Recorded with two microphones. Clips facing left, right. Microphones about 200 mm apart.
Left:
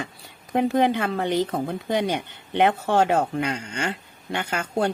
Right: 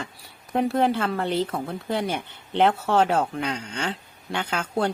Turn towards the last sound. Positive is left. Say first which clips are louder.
# left 1 dB
turn(degrees=10)  # may be behind; listen again after turning